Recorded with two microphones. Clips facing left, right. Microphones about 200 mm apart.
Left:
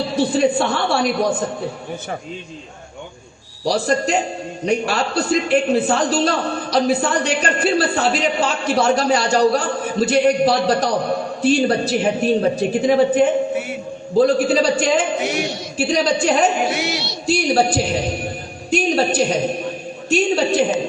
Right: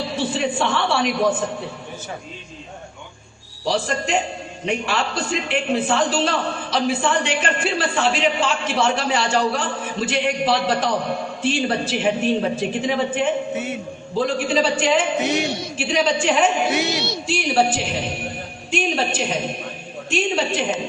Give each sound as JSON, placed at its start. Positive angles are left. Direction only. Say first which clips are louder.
{"t": 0.2, "sound": "a man's voice", "louder": "left 6 dB", "side_deg": 40}
{"t": 3.7, "sound": "a man's voice", "louder": "left 4 dB", "side_deg": 40}